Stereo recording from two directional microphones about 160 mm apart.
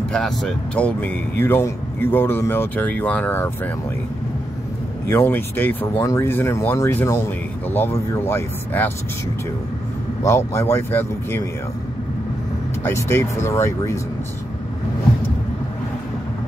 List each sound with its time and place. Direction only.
0.1 s speech: 5° left (ahead or behind)
5.0 s speech: 15° left (ahead or behind)
10.2 s speech: 15° left (ahead or behind)
12.8 s speech: 15° left (ahead or behind)